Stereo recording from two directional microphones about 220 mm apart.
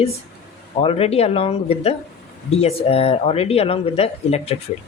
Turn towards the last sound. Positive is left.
turn(degrees=25)  # may be behind; listen again after turning